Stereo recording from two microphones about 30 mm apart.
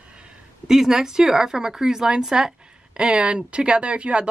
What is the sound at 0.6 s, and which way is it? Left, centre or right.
Speech, centre.